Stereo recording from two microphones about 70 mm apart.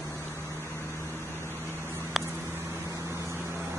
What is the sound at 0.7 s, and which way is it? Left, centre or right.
Vehicle, left.